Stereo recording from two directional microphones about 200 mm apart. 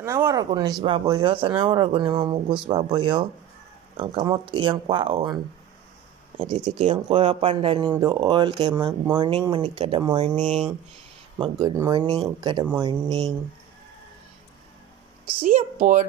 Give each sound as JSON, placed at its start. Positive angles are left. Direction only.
{"t": 0.0, "sound": "speech", "side_deg": -15}
{"t": 11.3, "sound": "speech", "side_deg": -25}
{"t": 15.4, "sound": "a woman's voice", "side_deg": -40}